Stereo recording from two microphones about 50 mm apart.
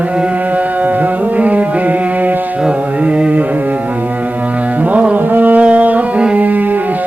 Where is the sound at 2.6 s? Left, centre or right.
Right.